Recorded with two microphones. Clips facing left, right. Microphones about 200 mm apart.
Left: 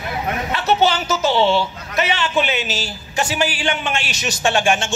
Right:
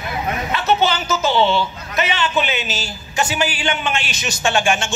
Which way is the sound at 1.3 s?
70° left (ahead or behind).